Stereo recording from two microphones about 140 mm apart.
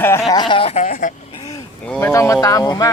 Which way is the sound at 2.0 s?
20° left (ahead or behind).